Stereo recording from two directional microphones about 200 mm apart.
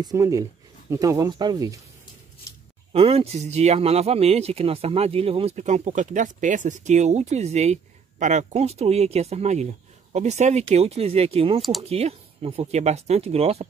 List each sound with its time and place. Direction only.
0.0 s speech: 15° right (ahead or behind)
2.9 s speech: 30° right (ahead or behind)